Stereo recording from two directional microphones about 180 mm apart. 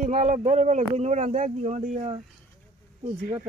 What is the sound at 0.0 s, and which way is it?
Speech, 40° right (ahead or behind).